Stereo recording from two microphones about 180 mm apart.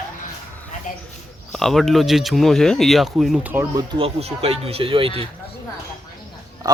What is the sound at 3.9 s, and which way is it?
Speech, 35° right (ahead or behind).